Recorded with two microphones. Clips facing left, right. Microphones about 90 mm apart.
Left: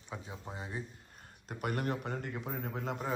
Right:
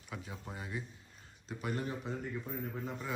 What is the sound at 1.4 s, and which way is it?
A man's voice, 60° left (ahead or behind).